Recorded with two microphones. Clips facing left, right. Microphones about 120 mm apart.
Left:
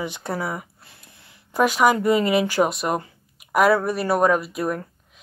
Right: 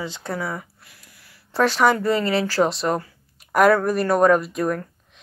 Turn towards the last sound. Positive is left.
turn(degrees=5)  # may be behind; listen again after turning